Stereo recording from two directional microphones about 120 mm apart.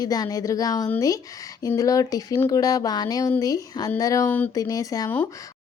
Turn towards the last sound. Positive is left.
turn(degrees=30)  # may be behind; listen again after turning